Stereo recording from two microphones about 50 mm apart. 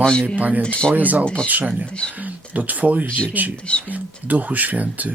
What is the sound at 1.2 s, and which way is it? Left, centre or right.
Speech, left.